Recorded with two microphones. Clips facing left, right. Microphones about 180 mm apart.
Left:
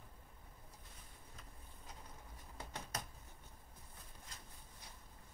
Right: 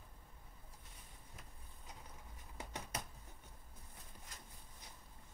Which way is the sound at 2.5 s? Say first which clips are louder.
Right 1 dB; 15° right (ahead or behind).